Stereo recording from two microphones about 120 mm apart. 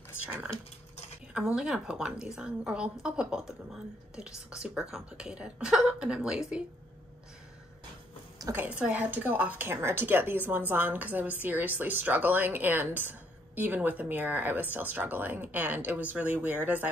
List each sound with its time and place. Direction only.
1.3 s a woman's voice: 5° right (ahead or behind)
8.5 s a woman's voice: 10° right (ahead or behind)